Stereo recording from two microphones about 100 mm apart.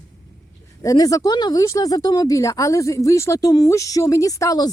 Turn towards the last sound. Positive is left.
turn(degrees=35)  # may be behind; listen again after turning